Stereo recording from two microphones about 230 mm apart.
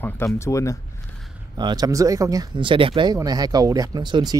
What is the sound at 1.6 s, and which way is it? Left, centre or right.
Speech, centre.